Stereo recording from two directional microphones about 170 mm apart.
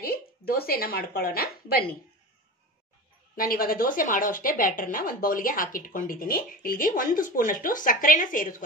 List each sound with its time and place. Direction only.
0.0 s a woman's voice: 60° left (ahead or behind)
3.3 s a woman's voice: 60° left (ahead or behind)